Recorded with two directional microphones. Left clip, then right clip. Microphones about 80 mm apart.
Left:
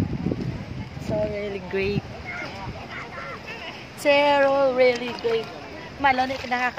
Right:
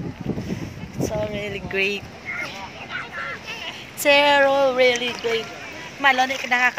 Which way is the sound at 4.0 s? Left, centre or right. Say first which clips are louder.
Right 3 dB; centre.